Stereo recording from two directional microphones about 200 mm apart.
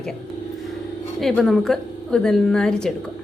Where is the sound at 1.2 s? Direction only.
Centre (ahead or behind).